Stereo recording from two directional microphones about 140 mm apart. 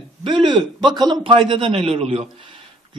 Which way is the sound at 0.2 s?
35° right (ahead or behind).